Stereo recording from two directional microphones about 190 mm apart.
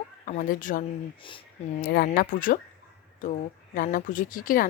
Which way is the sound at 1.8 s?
55° left (ahead or behind).